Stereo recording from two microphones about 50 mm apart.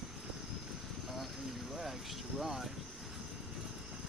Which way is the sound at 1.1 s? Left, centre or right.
Centre.